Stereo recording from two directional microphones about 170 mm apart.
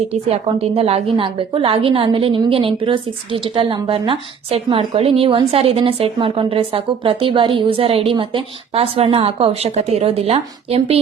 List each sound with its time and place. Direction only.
0.6 s a woman's voice: 35° right (ahead or behind)